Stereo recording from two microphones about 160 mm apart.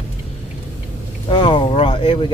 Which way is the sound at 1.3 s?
35° left (ahead or behind).